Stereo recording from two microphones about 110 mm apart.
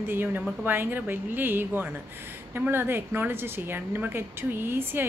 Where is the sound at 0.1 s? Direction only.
20° right (ahead or behind).